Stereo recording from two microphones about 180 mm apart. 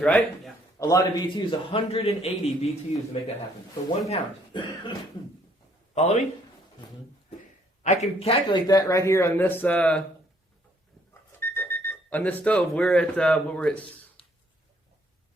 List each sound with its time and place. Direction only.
0.0 s a man's voice: 5° left (ahead or behind)
0.8 s a man's voice: 20° left (ahead or behind); by 2.7 s 35° left (ahead or behind)
4.1 s a man's voice: 25° left (ahead or behind)
5.9 s a man's voice: 40° left (ahead or behind)
7.9 s speech: 35° left (ahead or behind)
8.6 s speech: 20° left (ahead or behind)
11.3 s speech: 15° left (ahead or behind)